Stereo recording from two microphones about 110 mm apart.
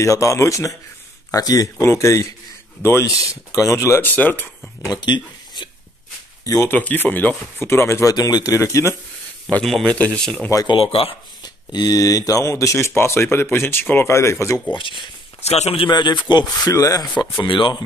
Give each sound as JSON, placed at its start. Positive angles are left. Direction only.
{"t": 0.0, "sound": "speech", "side_deg": 30}
{"t": 5.0, "sound": "speech", "side_deg": 45}
{"t": 6.4, "sound": "speech", "side_deg": 30}
{"t": 6.7, "sound": "speech", "side_deg": 15}
{"t": 9.7, "sound": "speech", "side_deg": 0}
{"t": 10.5, "sound": "speech", "side_deg": 35}
{"t": 10.8, "sound": "speech", "side_deg": 60}
{"t": 11.4, "sound": "speech", "side_deg": 40}
{"t": 14.7, "sound": "speech", "side_deg": 50}
{"t": 15.4, "sound": "a man's voice", "side_deg": 75}
{"t": 15.9, "sound": "speech", "side_deg": 45}
{"t": 17.2, "sound": "speech", "side_deg": 50}